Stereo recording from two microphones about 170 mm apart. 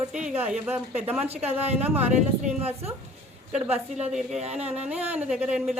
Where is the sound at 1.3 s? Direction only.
35° right (ahead or behind).